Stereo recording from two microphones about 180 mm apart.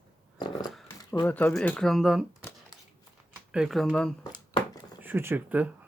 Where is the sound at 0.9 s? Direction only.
15° left (ahead or behind).